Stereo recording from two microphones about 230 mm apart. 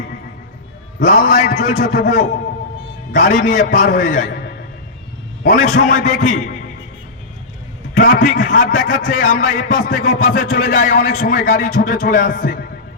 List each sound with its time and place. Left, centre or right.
0.9 s a man's voice: left
5.4 s a man's voice: left
7.9 s a man's voice: left